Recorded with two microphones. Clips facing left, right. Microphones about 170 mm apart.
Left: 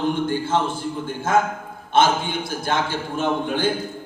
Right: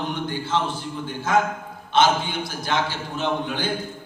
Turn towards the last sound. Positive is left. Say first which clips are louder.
# left 3 dB
turn(degrees=50)  # may be behind; listen again after turning